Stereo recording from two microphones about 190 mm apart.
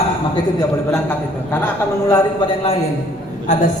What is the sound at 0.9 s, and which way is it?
Speech, 10° left (ahead or behind).